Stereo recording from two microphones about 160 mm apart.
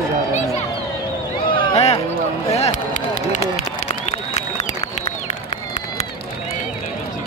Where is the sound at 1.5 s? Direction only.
35° left (ahead or behind).